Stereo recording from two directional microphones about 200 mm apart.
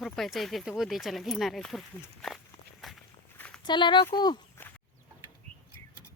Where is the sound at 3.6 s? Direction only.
25° left (ahead or behind).